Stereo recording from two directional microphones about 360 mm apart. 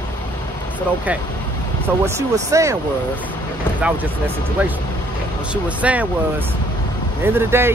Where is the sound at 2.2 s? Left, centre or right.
Centre.